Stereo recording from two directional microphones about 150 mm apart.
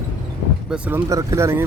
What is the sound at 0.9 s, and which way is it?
Speech, 20° right (ahead or behind).